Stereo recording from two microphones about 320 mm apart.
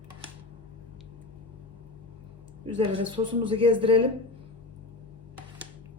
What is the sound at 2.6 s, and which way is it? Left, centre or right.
A woman's voice, centre.